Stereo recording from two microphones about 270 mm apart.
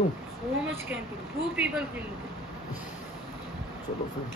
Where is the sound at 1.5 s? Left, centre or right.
Centre.